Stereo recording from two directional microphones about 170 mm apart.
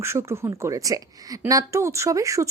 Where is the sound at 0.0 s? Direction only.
15° right (ahead or behind).